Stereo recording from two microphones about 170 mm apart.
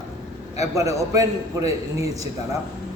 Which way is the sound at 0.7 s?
20° right (ahead or behind).